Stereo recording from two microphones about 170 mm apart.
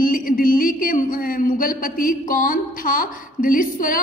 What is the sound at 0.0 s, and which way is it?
A man's voice, 55° left (ahead or behind).